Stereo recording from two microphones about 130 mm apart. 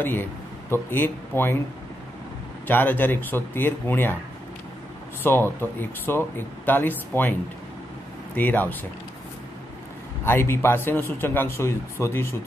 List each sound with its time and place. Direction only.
0.0 s speech: 15° left (ahead or behind)
2.6 s speech: 15° left (ahead or behind)
5.2 s speech: 15° left (ahead or behind)
8.4 s speech: 15° left (ahead or behind)
10.2 s speech: 15° left (ahead or behind)